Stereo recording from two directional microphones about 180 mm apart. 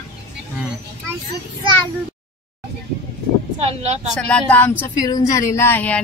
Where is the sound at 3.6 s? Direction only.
35° right (ahead or behind).